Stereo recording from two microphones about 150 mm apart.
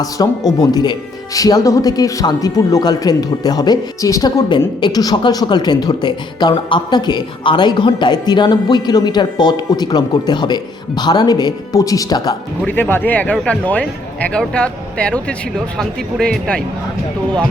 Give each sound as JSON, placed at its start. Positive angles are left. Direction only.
{"t": 0.0, "sound": "speech", "side_deg": 25}
{"t": 12.6, "sound": "speech", "side_deg": 15}